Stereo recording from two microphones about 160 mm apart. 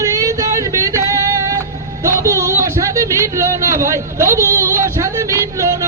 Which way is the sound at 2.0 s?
20° right (ahead or behind).